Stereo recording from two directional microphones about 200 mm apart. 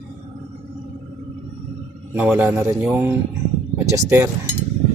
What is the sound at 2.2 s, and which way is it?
Speech, 10° right (ahead or behind).